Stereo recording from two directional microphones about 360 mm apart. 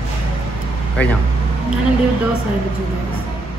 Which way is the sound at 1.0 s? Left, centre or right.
Centre.